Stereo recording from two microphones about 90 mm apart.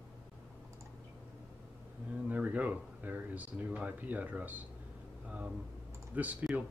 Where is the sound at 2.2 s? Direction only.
15° right (ahead or behind).